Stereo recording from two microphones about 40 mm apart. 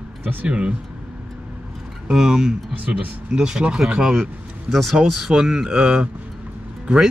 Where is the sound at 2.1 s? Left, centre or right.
Centre.